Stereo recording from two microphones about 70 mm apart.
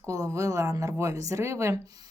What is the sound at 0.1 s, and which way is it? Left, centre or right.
Speech, right.